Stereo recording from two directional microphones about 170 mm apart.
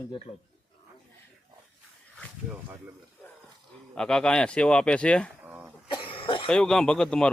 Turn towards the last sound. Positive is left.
turn(degrees=5)  # may be behind; listen again after turning